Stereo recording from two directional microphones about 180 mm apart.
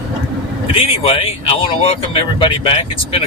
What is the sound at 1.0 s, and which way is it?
Speech, 30° left (ahead or behind).